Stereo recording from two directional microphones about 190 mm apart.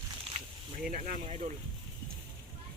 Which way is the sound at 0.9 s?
45° right (ahead or behind).